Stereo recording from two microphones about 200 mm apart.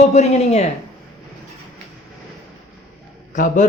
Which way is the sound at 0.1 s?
35° left (ahead or behind).